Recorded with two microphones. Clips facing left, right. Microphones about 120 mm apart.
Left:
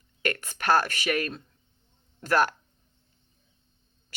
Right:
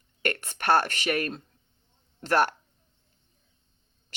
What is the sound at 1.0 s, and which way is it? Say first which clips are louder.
Speech: even; 30° right (ahead or behind).